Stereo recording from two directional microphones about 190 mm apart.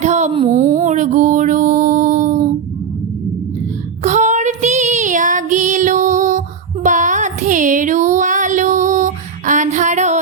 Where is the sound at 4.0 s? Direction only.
40° right (ahead or behind).